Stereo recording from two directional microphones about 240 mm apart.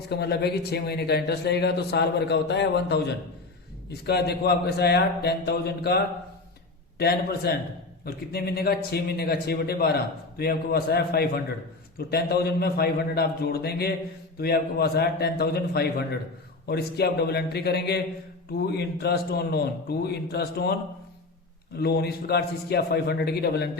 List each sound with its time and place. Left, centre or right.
0.1 s speech: left
7.0 s a man's voice: left
21.8 s a man's voice: left